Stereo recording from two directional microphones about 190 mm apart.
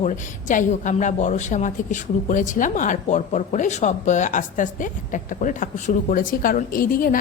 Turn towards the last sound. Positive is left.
turn(degrees=45)  # may be behind; listen again after turning